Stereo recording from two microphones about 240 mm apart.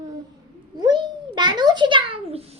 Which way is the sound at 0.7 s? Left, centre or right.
Centre.